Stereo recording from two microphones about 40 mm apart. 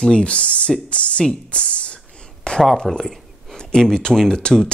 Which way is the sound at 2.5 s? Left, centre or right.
Left.